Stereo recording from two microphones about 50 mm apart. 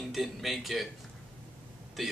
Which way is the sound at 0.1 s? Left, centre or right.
Centre.